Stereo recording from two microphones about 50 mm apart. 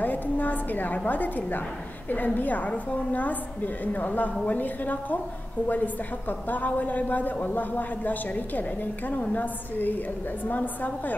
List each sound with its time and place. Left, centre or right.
0.0 s a woman's voice: left